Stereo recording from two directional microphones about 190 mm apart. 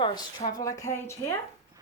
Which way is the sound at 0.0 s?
25° left (ahead or behind).